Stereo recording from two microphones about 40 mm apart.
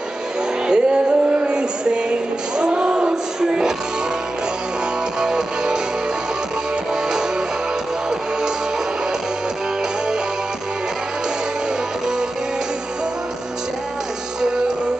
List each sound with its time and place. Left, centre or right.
0.7 s music: right
5.2 s music: centre